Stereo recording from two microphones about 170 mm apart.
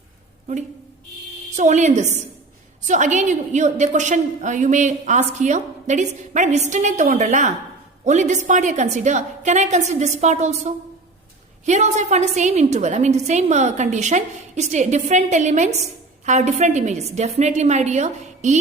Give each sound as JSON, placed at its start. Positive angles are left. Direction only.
{"t": 1.5, "sound": "a woman's voice", "side_deg": -45}